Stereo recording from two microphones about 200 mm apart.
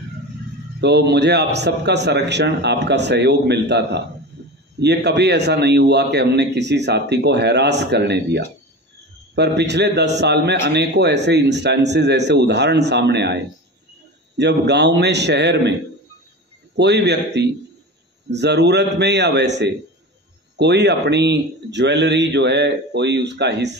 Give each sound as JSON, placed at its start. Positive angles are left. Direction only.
{"t": 0.7, "sound": "a man's voice", "side_deg": -55}
{"t": 4.3, "sound": "a sound", "side_deg": -60}
{"t": 4.7, "sound": "a man's voice", "side_deg": -55}
{"t": 16.7, "sound": "a man's voice", "side_deg": -60}